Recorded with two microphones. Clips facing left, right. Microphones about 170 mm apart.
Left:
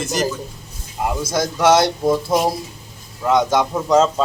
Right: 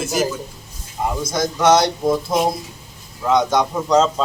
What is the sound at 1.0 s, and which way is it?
A man's voice, 5° left (ahead or behind).